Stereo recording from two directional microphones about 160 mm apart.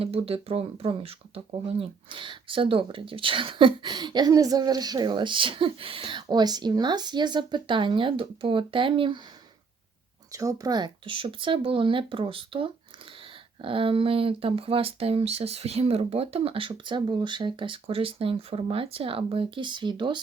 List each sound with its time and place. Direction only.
0.0 s speech: 40° right (ahead or behind)
10.3 s speech: 20° right (ahead or behind)